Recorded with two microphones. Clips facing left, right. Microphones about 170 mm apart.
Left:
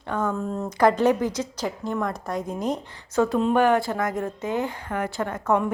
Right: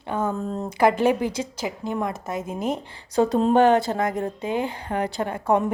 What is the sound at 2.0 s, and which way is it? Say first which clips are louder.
A woman's voice: left 1 dB; 20° right (ahead or behind).